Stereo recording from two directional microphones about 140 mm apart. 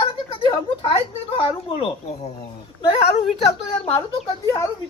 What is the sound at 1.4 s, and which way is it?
Speech, 40° left (ahead or behind).